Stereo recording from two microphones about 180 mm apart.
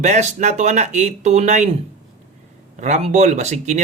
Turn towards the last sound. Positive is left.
turn(degrees=-40)  # may be behind; listen again after turning